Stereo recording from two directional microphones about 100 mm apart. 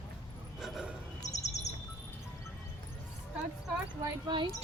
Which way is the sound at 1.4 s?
90° left.